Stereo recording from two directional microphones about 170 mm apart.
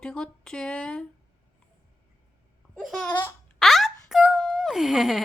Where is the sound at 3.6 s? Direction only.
Centre (ahead or behind).